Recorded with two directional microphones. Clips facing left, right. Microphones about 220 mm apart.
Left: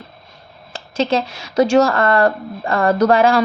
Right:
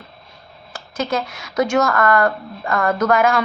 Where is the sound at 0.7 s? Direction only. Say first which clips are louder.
Left 4 dB; 30° left (ahead or behind).